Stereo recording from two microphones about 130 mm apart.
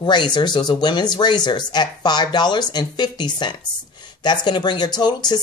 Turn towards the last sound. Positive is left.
turn(degrees=35)  # may be behind; listen again after turning